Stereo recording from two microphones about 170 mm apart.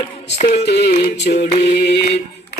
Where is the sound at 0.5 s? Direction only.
90° left.